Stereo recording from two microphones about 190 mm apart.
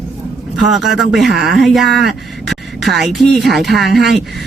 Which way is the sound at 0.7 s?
Centre (ahead or behind).